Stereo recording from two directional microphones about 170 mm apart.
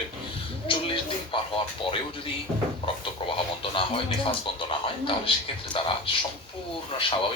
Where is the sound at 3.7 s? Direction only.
30° left (ahead or behind).